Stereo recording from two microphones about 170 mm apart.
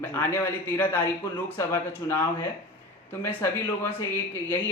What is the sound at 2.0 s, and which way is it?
A man's voice, 20° left (ahead or behind).